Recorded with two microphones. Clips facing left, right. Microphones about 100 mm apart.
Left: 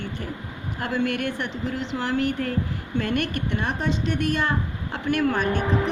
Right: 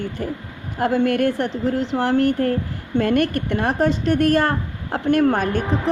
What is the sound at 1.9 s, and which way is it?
A woman's voice, 45° right (ahead or behind).